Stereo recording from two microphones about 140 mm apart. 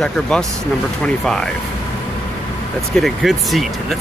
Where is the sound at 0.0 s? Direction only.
5° left (ahead or behind).